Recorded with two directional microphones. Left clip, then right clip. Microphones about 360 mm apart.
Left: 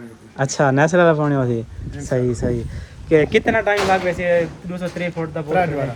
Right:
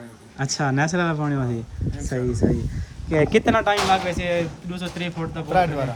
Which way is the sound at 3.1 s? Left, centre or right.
Centre.